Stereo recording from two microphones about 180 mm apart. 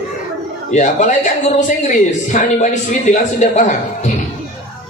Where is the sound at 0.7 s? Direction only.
40° left (ahead or behind).